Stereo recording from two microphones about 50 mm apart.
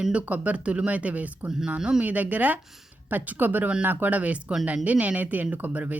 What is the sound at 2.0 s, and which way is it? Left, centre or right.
Speech, right.